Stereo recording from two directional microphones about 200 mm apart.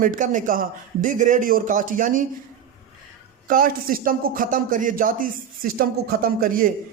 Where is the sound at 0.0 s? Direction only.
40° right (ahead or behind).